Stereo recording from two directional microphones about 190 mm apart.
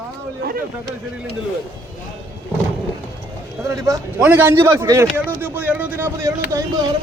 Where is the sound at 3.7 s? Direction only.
15° right (ahead or behind).